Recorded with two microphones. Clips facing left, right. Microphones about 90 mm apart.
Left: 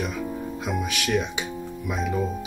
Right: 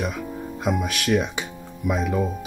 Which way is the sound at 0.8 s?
45° right (ahead or behind).